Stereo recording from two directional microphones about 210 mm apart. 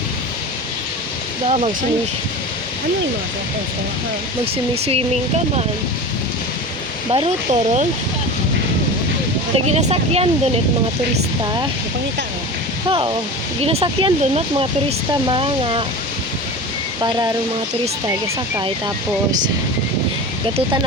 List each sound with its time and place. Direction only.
1.5 s speech: 30° right (ahead or behind)
4.5 s speech: 30° right (ahead or behind)
7.1 s speech: 30° right (ahead or behind)
9.6 s speech: 30° right (ahead or behind)
12.9 s speech: 25° right (ahead or behind)